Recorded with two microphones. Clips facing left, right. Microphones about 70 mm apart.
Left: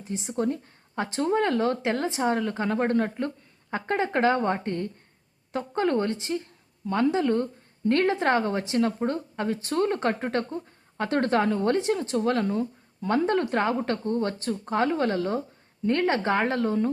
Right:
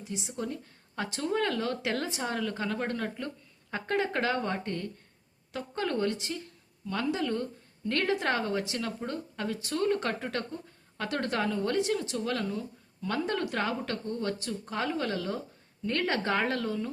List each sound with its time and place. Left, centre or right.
0.0 s a woman's voice: left